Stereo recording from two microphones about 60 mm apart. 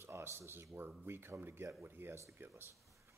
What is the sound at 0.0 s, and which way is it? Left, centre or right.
Speech, right.